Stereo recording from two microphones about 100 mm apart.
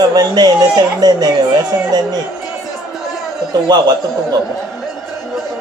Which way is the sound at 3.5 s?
45° right (ahead or behind).